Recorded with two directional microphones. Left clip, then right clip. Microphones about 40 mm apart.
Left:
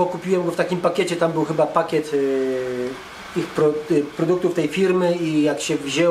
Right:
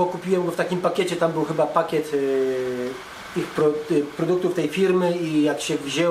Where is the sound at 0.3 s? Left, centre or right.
Left.